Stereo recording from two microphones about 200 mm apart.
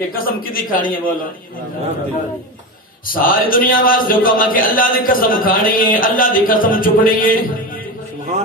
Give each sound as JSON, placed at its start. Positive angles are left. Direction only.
{"t": 0.1, "sound": "speech", "side_deg": 45}
{"t": 3.1, "sound": "speech", "side_deg": 45}